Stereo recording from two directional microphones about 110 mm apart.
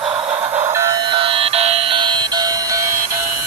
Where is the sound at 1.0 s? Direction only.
50° right (ahead or behind); by 2.9 s 35° right (ahead or behind).